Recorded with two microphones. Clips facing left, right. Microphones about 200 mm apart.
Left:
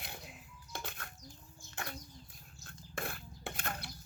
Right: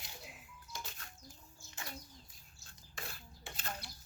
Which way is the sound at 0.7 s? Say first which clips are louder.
Left 5 dB; 60° left (ahead or behind).